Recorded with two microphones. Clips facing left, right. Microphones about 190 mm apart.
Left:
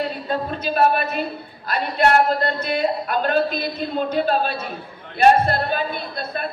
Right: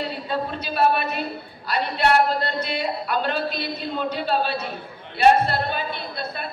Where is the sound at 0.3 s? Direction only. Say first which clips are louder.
Left 3 dB; 50° left (ahead or behind).